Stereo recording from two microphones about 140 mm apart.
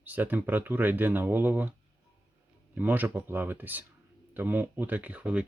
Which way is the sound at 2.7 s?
10° right (ahead or behind).